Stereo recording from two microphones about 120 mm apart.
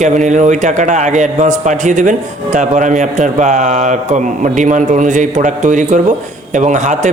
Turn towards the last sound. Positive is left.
turn(degrees=-90)